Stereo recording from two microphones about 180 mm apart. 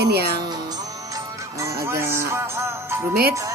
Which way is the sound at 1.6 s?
15° right (ahead or behind).